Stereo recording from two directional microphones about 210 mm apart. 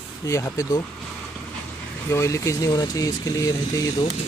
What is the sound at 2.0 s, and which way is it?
Speech, 15° left (ahead or behind).